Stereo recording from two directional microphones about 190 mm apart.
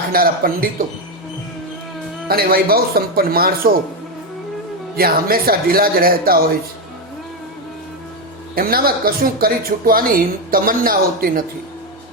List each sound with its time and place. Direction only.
0.1 s speech: 50° right (ahead or behind)
2.2 s speech: 50° right (ahead or behind)
4.9 s speech: 50° right (ahead or behind)
8.5 s speech: 50° right (ahead or behind)